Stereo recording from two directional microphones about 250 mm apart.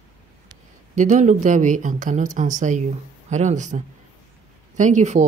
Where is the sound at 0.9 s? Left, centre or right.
Right.